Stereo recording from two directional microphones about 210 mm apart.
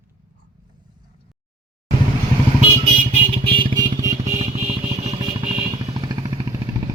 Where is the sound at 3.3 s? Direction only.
25° right (ahead or behind).